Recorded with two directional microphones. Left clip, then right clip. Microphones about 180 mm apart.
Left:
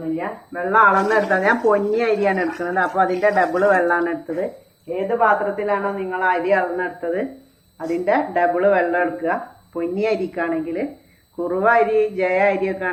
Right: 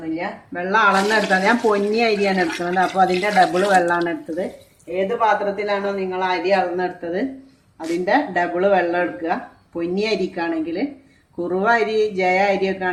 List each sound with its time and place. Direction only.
0.2 s speech: 75° right (ahead or behind)
5.2 s speech: 70° right (ahead or behind)